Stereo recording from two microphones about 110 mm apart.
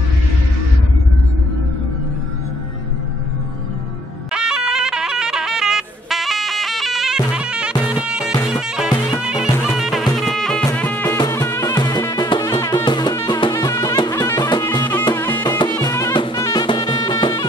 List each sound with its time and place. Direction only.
4.3 s music: 5° right (ahead or behind)
10.8 s music: 15° left (ahead or behind)
11.1 s music: 35° left (ahead or behind)
12.7 s drum: 40° left (ahead or behind)
13.3 s music: 40° left (ahead or behind)
15.1 s music: 20° left (ahead or behind)
15.4 s music: 40° left (ahead or behind)
15.8 s drum: 35° left (ahead or behind)
16.3 s drum kit: 30° left (ahead or behind)
16.6 s music: 45° left (ahead or behind)